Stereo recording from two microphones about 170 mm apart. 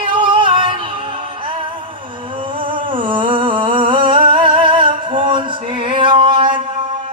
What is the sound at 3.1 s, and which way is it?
Humming, 30° right (ahead or behind).